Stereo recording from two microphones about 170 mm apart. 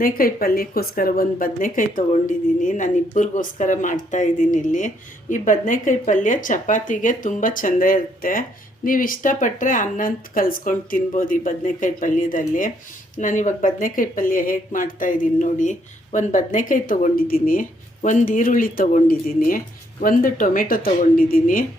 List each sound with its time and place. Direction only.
0.0 s speech: 55° left (ahead or behind)